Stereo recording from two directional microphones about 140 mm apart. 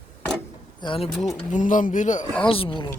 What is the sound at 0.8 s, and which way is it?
Speech, 40° left (ahead or behind).